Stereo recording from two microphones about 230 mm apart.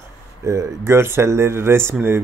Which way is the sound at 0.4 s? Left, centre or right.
Centre.